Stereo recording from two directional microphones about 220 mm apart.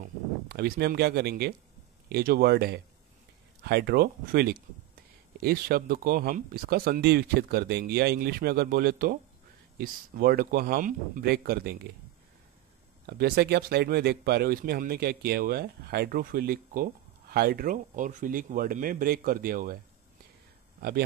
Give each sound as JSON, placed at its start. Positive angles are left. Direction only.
{"t": 0.5, "sound": "speech", "side_deg": -45}
{"t": 13.0, "sound": "speech", "side_deg": -45}